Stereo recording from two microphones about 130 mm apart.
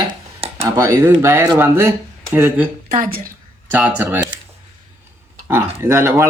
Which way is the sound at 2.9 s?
90° right.